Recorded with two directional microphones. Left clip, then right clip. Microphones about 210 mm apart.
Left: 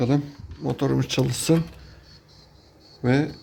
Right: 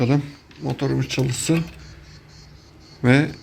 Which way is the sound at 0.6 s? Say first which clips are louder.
Even; 25° left (ahead or behind).